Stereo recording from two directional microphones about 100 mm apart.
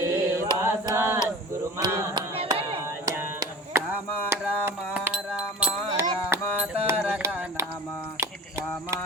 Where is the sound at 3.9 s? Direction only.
25° right (ahead or behind).